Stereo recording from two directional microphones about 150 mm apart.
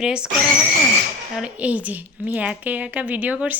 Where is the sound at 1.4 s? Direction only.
10° right (ahead or behind).